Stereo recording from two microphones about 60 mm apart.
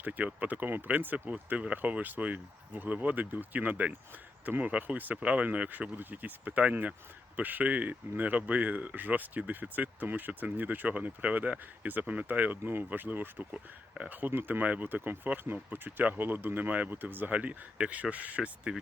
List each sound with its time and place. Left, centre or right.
0.0 s speech: right